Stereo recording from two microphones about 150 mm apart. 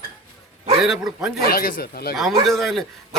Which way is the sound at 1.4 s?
80° left.